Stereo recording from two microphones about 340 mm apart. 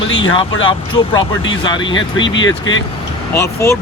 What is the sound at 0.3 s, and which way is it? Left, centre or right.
Speech, centre.